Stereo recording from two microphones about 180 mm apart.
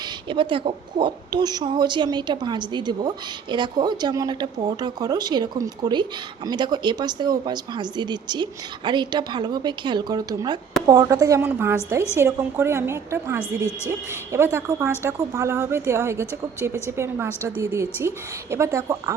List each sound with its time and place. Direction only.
0.0 s speech: 25° right (ahead or behind)